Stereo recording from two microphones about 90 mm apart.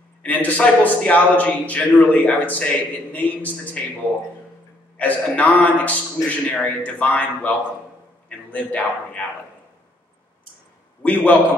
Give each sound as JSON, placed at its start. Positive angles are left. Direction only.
{"t": 0.2, "sound": "a man's voice", "side_deg": 20}
{"t": 4.9, "sound": "a man's voice", "side_deg": 15}
{"t": 11.0, "sound": "a man's voice", "side_deg": 15}